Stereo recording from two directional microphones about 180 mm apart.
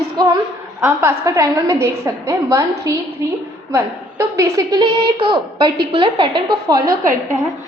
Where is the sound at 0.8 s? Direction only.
15° right (ahead or behind).